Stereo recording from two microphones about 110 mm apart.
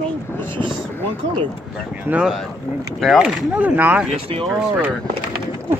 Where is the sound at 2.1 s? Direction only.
10° right (ahead or behind).